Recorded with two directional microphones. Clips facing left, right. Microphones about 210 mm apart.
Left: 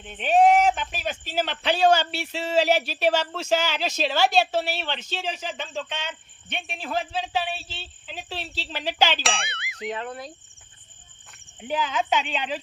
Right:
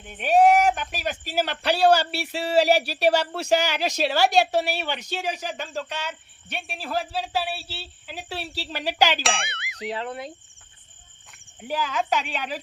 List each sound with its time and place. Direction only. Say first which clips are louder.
0.0 s speech: right 1 dB; 10° right (ahead or behind)
9.2 s speech: right 1 dB; centre (ahead or behind)
9.9 s speech: right 2 dB; 30° right (ahead or behind)
12.3 s speech: left 2 dB; 10° right (ahead or behind)